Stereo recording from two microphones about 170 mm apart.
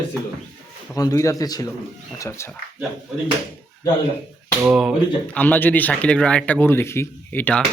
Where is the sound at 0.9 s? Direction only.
20° left (ahead or behind).